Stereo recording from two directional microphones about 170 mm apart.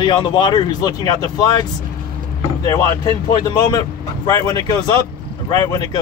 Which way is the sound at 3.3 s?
25° left (ahead or behind).